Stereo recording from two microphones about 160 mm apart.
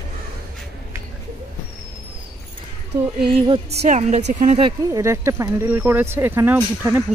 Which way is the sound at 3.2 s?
35° right (ahead or behind).